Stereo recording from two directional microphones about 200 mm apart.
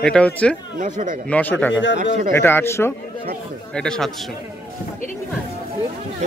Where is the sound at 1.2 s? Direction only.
5° left (ahead or behind).